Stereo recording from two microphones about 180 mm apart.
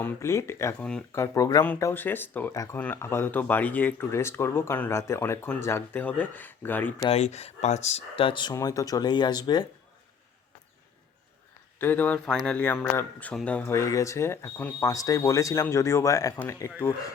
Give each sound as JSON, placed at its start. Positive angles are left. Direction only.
{"t": 0.0, "sound": "speech", "side_deg": 15}
{"t": 1.2, "sound": "speech", "side_deg": 20}
{"t": 7.0, "sound": "speech", "side_deg": 35}
{"t": 11.8, "sound": "speech", "side_deg": 10}